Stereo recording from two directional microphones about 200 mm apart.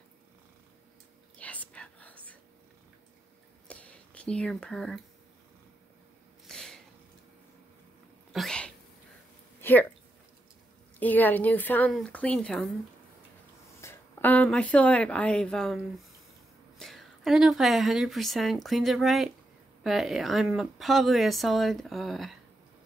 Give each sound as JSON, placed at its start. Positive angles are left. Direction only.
{"t": 1.4, "sound": "whispering", "side_deg": 5}
{"t": 3.6, "sound": "whispering", "side_deg": 5}
{"t": 6.4, "sound": "a sound", "side_deg": 0}
{"t": 8.3, "sound": "cat", "side_deg": 0}
{"t": 9.6, "sound": "a sound", "side_deg": 10}
{"t": 11.0, "sound": "a woman's voice", "side_deg": 10}
{"t": 13.7, "sound": "a woman's voice", "side_deg": 10}